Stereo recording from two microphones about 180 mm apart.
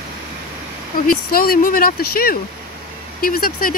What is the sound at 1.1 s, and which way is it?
Speech, 55° left (ahead or behind).